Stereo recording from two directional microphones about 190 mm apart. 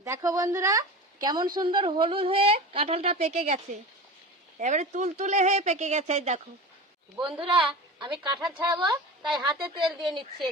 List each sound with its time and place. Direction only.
0.0 s a woman's voice: 15° right (ahead or behind)
9.2 s speech: 5° right (ahead or behind)